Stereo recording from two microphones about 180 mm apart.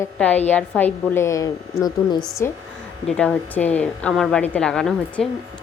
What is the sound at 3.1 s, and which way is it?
A woman's voice, 5° left (ahead or behind).